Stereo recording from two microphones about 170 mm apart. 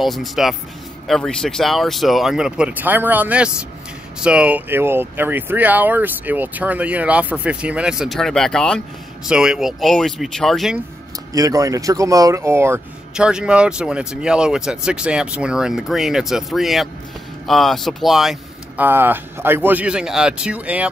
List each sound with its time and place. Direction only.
0.0 s speech: centre (ahead or behind)
11.3 s speech: 20° right (ahead or behind)
13.1 s speech: 5° right (ahead or behind)
18.9 s speech: 10° right (ahead or behind)